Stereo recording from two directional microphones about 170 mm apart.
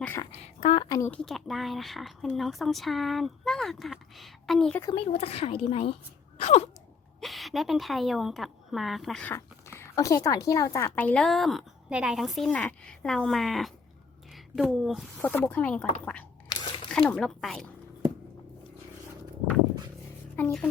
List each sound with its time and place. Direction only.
0.3 s a sound: 35° left (ahead or behind)
0.9 s speech: 20° left (ahead or behind)
1.1 s a woman's voice: centre (ahead or behind)
4.8 s speech: 25° left (ahead or behind)
5.1 s a woman's voice: 35° left (ahead or behind)
7.2 s a woman's voice: centre (ahead or behind)
9.7 s a woman's voice: 15° left (ahead or behind); by 15.0 s centre (ahead or behind)
15.2 s speech: 10° left (ahead or behind)
16.9 s a woman's voice: 5° left (ahead or behind)
20.3 s a woman's voice: 5° left (ahead or behind)